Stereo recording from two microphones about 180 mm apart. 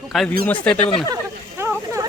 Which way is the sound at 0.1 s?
Centre (ahead or behind).